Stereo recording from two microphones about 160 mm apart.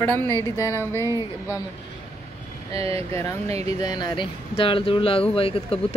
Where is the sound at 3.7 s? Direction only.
25° left (ahead or behind).